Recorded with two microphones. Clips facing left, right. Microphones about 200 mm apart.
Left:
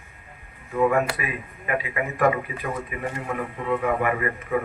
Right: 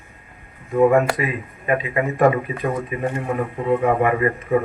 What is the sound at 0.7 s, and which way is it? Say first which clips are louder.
A man's voice: right 6 dB; 30° right (ahead or behind).